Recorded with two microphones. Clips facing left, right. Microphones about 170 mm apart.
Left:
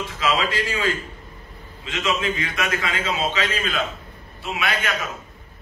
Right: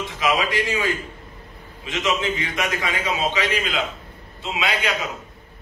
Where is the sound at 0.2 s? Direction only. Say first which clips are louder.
Right 1 dB; 15° right (ahead or behind).